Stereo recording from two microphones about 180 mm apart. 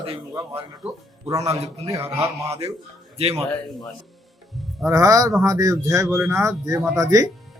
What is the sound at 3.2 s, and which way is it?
Speech, 35° right (ahead or behind).